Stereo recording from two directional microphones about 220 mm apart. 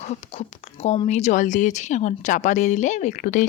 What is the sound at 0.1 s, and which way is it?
Speech, 30° left (ahead or behind).